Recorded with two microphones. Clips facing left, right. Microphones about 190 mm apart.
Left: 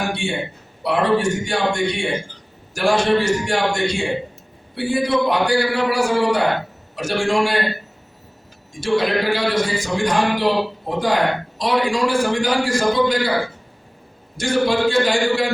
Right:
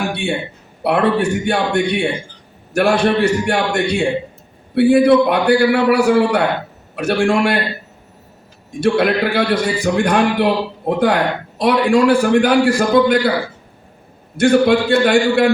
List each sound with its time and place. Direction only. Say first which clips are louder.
0.1 s a man's voice: right 3 dB; 60° right (ahead or behind)
8.8 s a man's voice: right 4 dB; 60° right (ahead or behind)
14.3 s a man's voice: right 6 dB; 60° right (ahead or behind)